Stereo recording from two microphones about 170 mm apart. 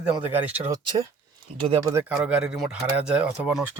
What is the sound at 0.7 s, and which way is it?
Speech, 20° right (ahead or behind).